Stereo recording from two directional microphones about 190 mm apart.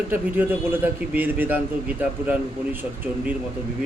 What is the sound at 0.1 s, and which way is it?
A man's voice, 10° right (ahead or behind).